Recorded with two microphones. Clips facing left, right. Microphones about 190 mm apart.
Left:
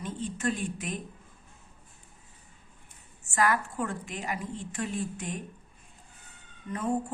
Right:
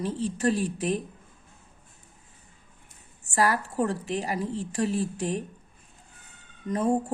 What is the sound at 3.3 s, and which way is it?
A woman's voice, 35° right (ahead or behind).